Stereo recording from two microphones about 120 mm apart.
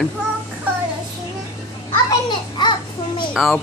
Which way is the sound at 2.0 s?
40° left (ahead or behind).